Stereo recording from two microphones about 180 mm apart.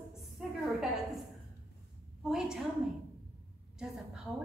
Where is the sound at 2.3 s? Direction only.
5° right (ahead or behind).